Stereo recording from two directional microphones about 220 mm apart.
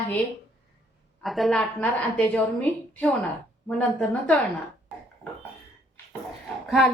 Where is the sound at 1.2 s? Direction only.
Centre (ahead or behind).